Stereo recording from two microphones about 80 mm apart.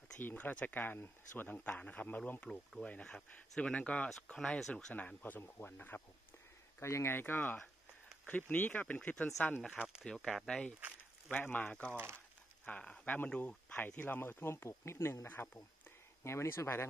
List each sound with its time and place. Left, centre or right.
0.2 s speech: left; by 4.9 s centre
4.9 s speech: left
10.1 s speech: centre
11.2 s speech: left